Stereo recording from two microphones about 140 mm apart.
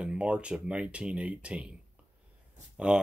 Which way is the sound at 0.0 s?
10° right (ahead or behind).